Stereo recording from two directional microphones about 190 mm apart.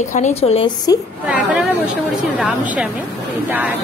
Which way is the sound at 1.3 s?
5° right (ahead or behind).